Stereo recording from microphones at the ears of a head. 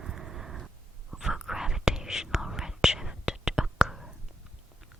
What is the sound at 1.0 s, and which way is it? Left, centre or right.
Whispering, centre.